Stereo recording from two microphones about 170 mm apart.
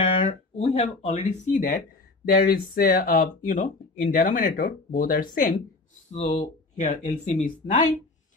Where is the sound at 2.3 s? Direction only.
60° left (ahead or behind).